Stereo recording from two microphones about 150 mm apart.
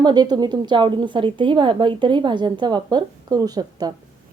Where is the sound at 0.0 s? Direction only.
30° right (ahead or behind).